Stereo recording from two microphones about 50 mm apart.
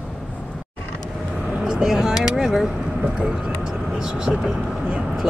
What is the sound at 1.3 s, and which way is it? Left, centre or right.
Speech, centre.